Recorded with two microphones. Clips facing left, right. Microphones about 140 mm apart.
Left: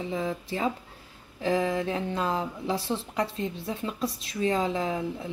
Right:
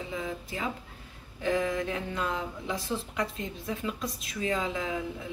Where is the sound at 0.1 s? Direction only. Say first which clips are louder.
Left 5 dB; 30° left (ahead or behind).